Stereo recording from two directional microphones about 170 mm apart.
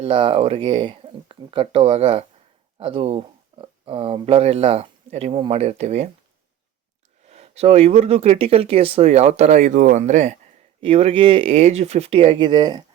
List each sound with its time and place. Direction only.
0.0 s speech: 30° right (ahead or behind)
2.7 s a sound: 35° right (ahead or behind)
4.3 s speech: 35° right (ahead or behind)
7.3 s speech: 40° right (ahead or behind)